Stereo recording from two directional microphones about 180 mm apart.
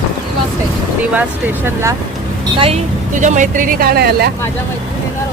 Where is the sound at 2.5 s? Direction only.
30° right (ahead or behind).